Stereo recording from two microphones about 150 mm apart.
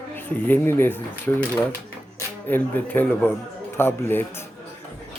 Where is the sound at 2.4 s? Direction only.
10° left (ahead or behind).